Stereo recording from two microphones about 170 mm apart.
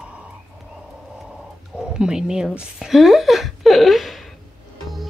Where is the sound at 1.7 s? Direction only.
5° right (ahead or behind).